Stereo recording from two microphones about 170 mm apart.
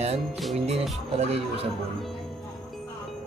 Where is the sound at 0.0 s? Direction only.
40° right (ahead or behind).